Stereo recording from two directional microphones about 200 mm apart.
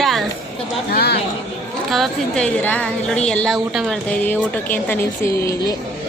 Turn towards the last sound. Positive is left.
turn(degrees=10)  # may be behind; listen again after turning